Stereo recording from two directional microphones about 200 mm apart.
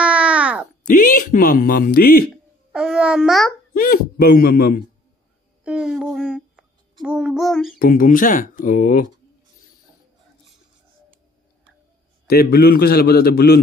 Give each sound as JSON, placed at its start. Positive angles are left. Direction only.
{"t": 0.0, "sound": "a sound", "side_deg": -5}
{"t": 0.8, "sound": "speech", "side_deg": 40}
{"t": 2.7, "sound": "a child's voice", "side_deg": -5}
{"t": 3.7, "sound": "speech", "side_deg": 45}
{"t": 5.6, "sound": "a child's voice", "side_deg": -5}
{"t": 7.8, "sound": "speech", "side_deg": 45}
{"t": 12.3, "sound": "speech", "side_deg": 50}